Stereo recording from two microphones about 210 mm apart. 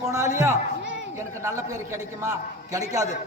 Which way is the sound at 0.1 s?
15° right (ahead or behind).